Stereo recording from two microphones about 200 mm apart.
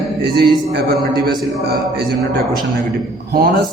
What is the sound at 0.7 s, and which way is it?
Speech, 50° right (ahead or behind).